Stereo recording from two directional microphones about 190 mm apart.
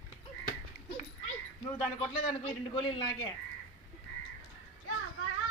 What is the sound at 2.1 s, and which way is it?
Speech, 25° left (ahead or behind).